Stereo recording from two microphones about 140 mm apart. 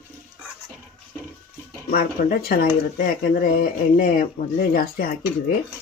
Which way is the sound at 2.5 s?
90° left.